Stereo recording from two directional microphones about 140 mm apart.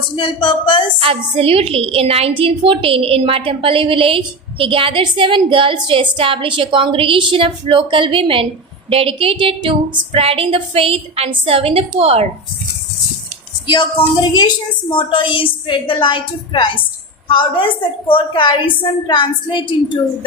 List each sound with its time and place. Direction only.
0.2 s a woman's voice: 35° left (ahead or behind)
0.9 s a woman's voice: 40° right (ahead or behind)
13.7 s a woman's voice: 35° left (ahead or behind)